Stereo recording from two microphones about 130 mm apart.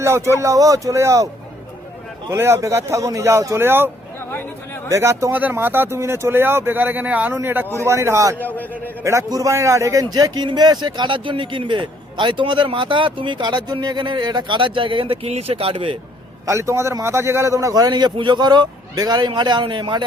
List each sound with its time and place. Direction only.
0.0 s speech: 20° right (ahead or behind)
2.3 s speech: 20° right (ahead or behind)
4.3 s speech: 15° left (ahead or behind)
4.9 s speech: 20° right (ahead or behind)
8.4 s a man's voice: 15° left (ahead or behind)
9.0 s a man's voice: 25° right (ahead or behind); by 16.0 s 45° right (ahead or behind)
16.5 s a man's voice: 25° right (ahead or behind)